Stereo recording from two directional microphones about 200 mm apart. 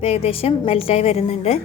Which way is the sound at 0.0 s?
30° left (ahead or behind).